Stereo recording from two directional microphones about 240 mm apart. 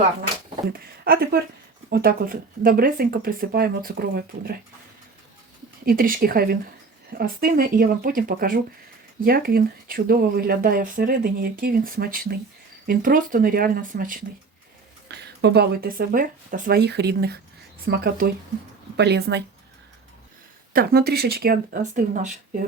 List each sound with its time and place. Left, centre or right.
0.7 s speech: right
5.8 s speech: right
20.7 s speech: right